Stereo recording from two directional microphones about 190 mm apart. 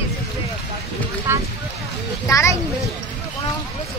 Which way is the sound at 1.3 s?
15° right (ahead or behind).